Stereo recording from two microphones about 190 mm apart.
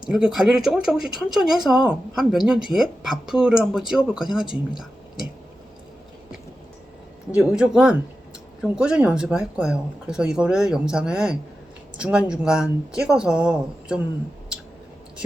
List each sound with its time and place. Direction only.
0.1 s speech: 5° right (ahead or behind)
7.3 s speech: 5° right (ahead or behind)